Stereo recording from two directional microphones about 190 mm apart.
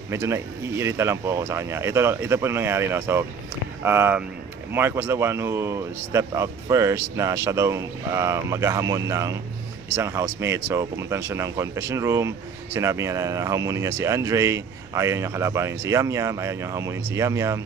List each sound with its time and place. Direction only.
0.1 s speech: 15° right (ahead or behind)